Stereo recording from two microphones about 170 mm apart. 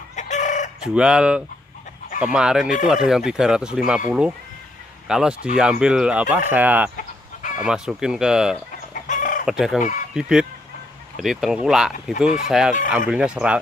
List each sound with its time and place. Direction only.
0.1 s chicken: 45° left (ahead or behind)
0.8 s speech: 5° right (ahead or behind)
7.0 s chicken: 50° left (ahead or behind)
7.6 s speech: 5° right (ahead or behind)
8.9 s chicken: 50° left (ahead or behind)
9.5 s speech: centre (ahead or behind)
9.8 s speech: 50° left (ahead or behind)
10.1 s speech: 5° right (ahead or behind)